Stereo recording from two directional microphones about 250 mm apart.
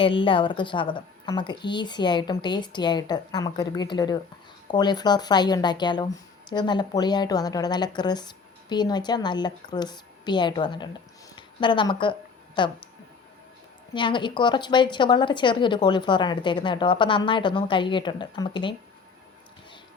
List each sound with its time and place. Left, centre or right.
0.0 s a woman's voice: left
13.9 s a woman's voice: centre